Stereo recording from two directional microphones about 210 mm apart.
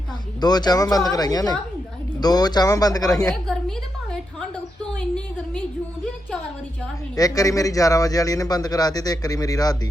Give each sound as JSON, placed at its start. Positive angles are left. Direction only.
{"t": 0.3, "sound": "speech", "side_deg": 20}
{"t": 3.4, "sound": "a sound", "side_deg": 5}
{"t": 7.2, "sound": "speech", "side_deg": 15}